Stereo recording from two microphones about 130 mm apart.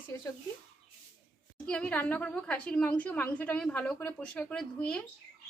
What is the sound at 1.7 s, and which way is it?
A woman's voice, 10° left (ahead or behind).